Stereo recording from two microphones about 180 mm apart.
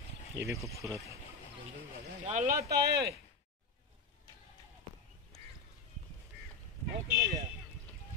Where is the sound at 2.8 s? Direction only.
65° right (ahead or behind).